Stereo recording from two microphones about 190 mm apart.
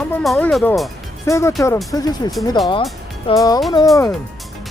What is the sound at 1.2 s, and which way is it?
Speech, 15° left (ahead or behind).